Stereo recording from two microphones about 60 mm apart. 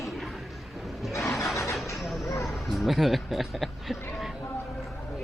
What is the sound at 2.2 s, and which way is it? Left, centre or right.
Vehicle, left.